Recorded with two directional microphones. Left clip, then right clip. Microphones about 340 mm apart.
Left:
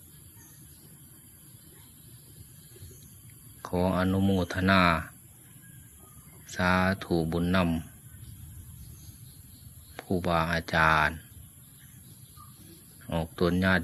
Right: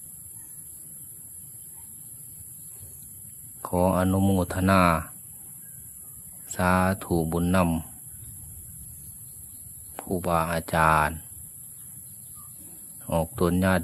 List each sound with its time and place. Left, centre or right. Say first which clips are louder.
3.6 s speech: right 5 dB; right
6.5 s speech: right 3 dB; right
9.9 s speech: right 2 dB; right
13.1 s speech: right 4 dB; right